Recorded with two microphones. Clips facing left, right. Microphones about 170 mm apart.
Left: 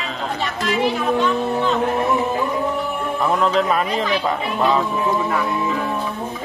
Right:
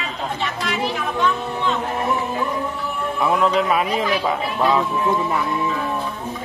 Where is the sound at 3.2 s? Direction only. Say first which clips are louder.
Even; 5° right (ahead or behind).